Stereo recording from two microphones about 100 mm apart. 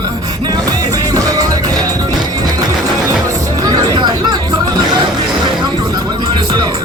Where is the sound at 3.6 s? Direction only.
40° right (ahead or behind).